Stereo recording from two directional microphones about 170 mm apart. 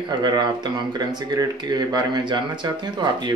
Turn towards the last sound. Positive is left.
turn(degrees=-25)  # may be behind; listen again after turning